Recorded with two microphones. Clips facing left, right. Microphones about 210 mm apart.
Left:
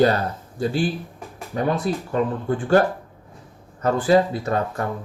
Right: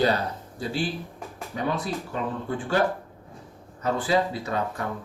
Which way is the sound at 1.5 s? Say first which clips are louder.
Left 6 dB; 50° left (ahead or behind).